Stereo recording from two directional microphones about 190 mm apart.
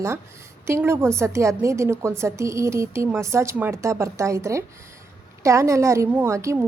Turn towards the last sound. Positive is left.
turn(degrees=-15)  # may be behind; listen again after turning